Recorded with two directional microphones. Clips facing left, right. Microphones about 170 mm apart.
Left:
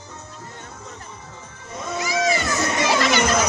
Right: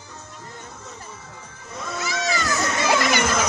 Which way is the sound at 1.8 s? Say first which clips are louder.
Left 5 dB; 15° left (ahead or behind).